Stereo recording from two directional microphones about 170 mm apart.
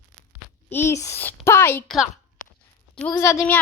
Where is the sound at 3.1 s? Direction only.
20° left (ahead or behind).